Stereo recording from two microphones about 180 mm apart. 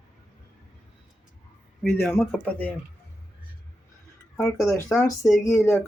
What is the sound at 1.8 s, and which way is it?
Speech, 5° left (ahead or behind).